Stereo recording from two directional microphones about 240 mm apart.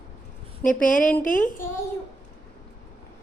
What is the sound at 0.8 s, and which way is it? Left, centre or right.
Speech, left.